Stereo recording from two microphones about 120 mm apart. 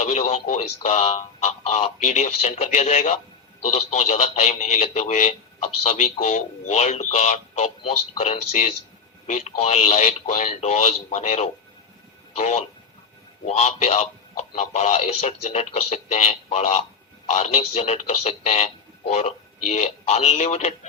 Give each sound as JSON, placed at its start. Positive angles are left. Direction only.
{"t": 0.0, "sound": "a man's voice", "side_deg": 70}